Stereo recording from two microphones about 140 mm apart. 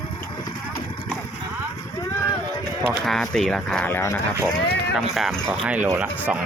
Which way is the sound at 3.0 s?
Centre (ahead or behind).